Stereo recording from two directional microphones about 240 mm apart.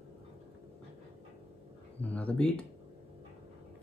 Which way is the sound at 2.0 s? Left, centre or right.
Centre.